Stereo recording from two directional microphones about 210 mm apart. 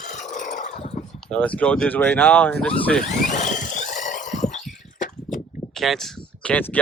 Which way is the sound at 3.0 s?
35° left (ahead or behind).